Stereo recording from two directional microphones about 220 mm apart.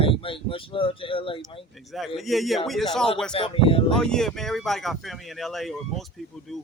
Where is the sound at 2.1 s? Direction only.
Centre (ahead or behind).